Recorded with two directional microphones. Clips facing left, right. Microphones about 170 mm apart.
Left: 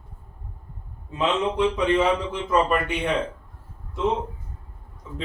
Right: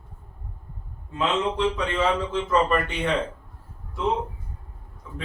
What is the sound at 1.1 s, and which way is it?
A man's voice, 20° left (ahead or behind).